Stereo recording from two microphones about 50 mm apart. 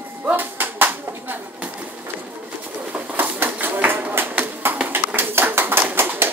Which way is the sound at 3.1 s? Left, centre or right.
Right.